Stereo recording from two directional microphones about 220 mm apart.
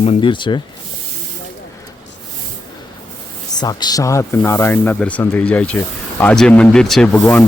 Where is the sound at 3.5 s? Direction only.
20° left (ahead or behind).